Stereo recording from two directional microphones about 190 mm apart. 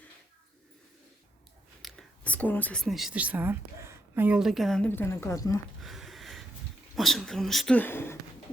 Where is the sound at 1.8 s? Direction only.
5° left (ahead or behind).